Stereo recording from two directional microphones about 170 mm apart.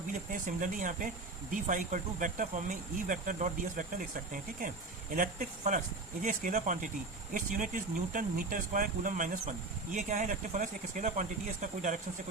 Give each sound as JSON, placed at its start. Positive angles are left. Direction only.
{"t": 0.1, "sound": "speech", "side_deg": -50}
{"t": 5.1, "sound": "speech", "side_deg": -50}